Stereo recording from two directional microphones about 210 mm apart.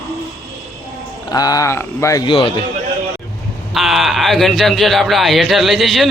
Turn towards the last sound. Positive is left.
turn(degrees=0)  # may be behind; listen again after turning